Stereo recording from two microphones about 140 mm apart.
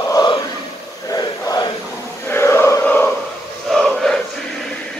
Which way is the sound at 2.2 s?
15° left (ahead or behind).